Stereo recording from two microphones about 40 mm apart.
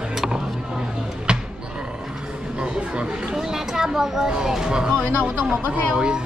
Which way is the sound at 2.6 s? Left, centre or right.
Right.